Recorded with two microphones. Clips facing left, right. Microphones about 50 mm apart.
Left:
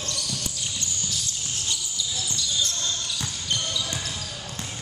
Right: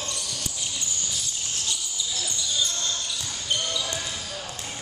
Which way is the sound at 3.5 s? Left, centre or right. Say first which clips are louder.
Right 1 dB; centre.